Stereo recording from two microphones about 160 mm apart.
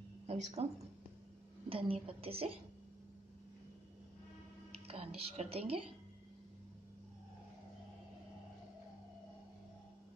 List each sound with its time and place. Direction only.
0.3 s a woman's voice: 40° right (ahead or behind)
1.7 s a woman's voice: 35° right (ahead or behind)
4.8 s a woman's voice: 40° right (ahead or behind)